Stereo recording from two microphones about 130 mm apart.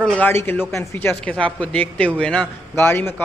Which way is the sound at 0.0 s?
10° left (ahead or behind).